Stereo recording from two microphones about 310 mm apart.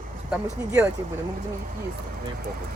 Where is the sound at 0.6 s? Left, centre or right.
Centre.